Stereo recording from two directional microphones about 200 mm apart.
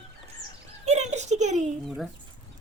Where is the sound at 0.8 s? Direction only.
35° right (ahead or behind).